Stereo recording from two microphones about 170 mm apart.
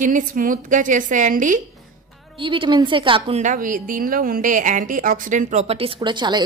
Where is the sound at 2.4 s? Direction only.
30° right (ahead or behind).